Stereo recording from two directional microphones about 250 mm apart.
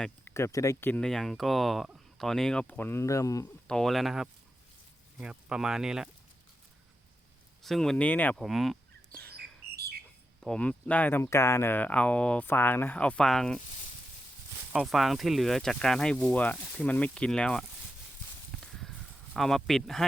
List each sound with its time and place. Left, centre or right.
0.0 s speech: centre
3.8 s speech: centre
7.6 s speech: centre
9.7 s a sound: right
10.4 s speech: centre
14.7 s speech: centre
18.5 s a sound: centre